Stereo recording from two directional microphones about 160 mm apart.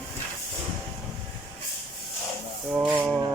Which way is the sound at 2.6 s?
10° right (ahead or behind).